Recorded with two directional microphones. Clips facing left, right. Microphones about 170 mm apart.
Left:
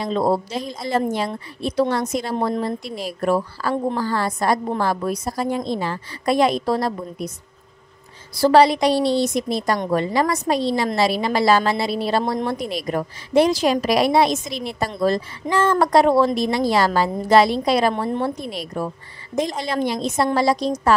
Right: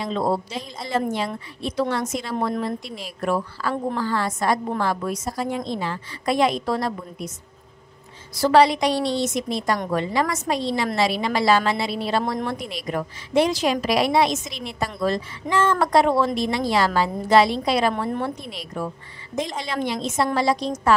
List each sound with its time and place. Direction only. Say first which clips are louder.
0.0 s a woman's voice: left 3 dB; 40° left (ahead or behind)
2.3 s a woman's voice: left 1 dB; 25° left (ahead or behind)
2.6 s a woman's voice: left 3 dB; 40° left (ahead or behind)
8.4 s a woman's voice: left 2 dB; 35° left (ahead or behind)